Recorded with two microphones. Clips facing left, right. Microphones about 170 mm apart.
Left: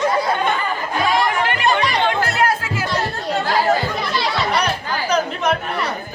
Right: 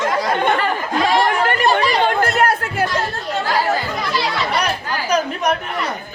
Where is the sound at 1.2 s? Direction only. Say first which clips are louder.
Right 2 dB; 45° right (ahead or behind).